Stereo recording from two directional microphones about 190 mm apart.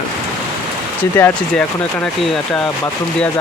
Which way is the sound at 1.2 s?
10° left (ahead or behind).